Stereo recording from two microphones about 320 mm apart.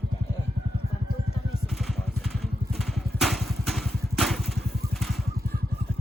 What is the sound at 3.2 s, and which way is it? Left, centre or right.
Vehicle, centre.